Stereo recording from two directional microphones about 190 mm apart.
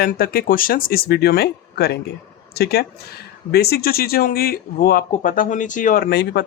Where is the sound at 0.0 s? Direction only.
50° left (ahead or behind).